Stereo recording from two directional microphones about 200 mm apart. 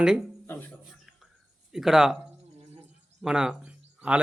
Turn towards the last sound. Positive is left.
turn(degrees=-5)  # may be behind; listen again after turning